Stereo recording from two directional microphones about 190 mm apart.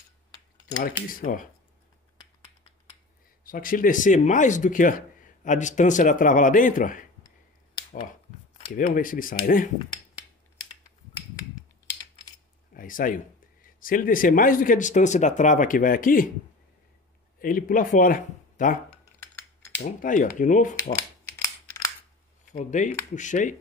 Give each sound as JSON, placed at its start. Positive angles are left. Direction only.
{"t": 0.8, "sound": "speech", "side_deg": 45}
{"t": 3.4, "sound": "speech", "side_deg": 45}
{"t": 7.7, "sound": "finger snapping", "side_deg": 45}
{"t": 8.7, "sound": "speech", "side_deg": 45}
{"t": 12.7, "sound": "speech", "side_deg": 45}
{"t": 17.4, "sound": "speech", "side_deg": 50}
{"t": 20.0, "sound": "speech", "side_deg": 45}
{"t": 21.6, "sound": "scissors", "side_deg": 15}
{"t": 22.5, "sound": "speech", "side_deg": 40}